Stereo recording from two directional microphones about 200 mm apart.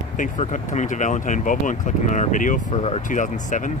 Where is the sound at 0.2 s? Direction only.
40° left (ahead or behind).